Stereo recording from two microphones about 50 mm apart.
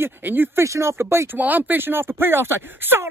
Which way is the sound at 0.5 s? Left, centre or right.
Right.